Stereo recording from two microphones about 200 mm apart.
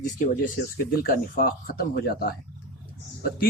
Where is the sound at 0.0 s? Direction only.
40° left (ahead or behind).